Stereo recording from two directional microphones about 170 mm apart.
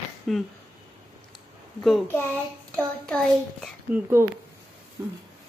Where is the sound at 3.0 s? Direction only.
Centre (ahead or behind).